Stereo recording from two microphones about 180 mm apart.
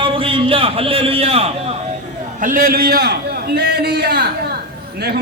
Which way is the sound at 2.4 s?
50° right (ahead or behind).